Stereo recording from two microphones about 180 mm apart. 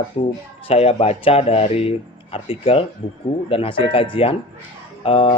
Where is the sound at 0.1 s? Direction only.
30° left (ahead or behind).